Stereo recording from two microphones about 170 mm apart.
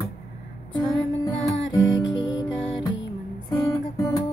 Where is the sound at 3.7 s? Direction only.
20° left (ahead or behind).